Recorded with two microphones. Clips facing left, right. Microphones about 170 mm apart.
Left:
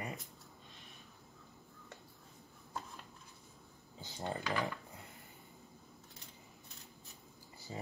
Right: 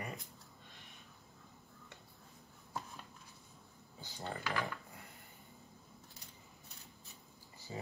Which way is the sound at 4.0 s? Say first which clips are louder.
Left 3 dB; 20° left (ahead or behind).